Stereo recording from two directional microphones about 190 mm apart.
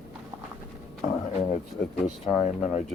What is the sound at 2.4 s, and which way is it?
Speech, 35° left (ahead or behind).